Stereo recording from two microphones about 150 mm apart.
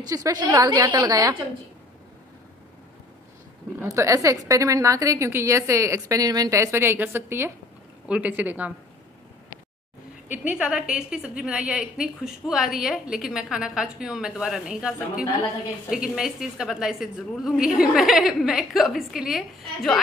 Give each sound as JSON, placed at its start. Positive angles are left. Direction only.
{"t": 0.1, "sound": "a woman's voice", "side_deg": -25}
{"t": 3.8, "sound": "a woman's voice", "side_deg": -20}
{"t": 10.3, "sound": "a woman's voice", "side_deg": -10}